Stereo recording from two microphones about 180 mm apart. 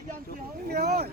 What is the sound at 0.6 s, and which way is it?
Speech, 65° right (ahead or behind).